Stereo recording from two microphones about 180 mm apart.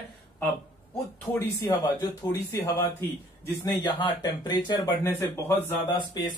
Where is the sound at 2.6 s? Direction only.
15° left (ahead or behind).